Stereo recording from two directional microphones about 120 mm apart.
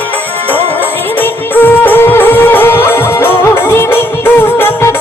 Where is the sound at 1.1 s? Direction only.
15° left (ahead or behind).